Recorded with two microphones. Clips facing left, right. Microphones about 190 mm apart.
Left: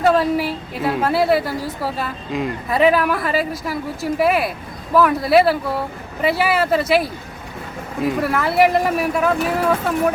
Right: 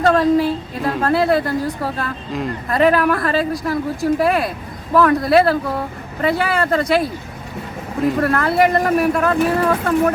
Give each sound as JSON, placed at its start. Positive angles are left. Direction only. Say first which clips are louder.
{"t": 0.0, "sound": "a woman's voice", "louder": "right 2 dB", "side_deg": 5}